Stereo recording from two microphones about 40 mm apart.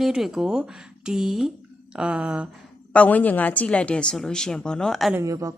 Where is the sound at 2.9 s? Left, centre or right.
Left.